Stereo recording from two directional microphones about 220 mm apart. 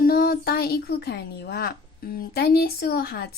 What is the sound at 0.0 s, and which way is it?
Speech, 45° left (ahead or behind).